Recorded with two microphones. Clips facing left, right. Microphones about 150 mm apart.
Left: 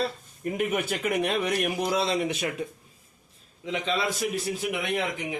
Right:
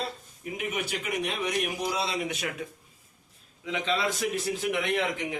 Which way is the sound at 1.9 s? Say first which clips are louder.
Left 5 dB; 40° left (ahead or behind).